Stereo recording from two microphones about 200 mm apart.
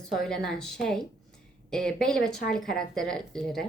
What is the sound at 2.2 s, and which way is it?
Speech, 50° left (ahead or behind).